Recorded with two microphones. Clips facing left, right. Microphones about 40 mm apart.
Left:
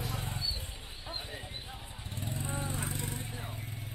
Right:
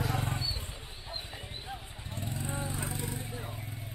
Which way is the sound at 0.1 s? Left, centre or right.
Right.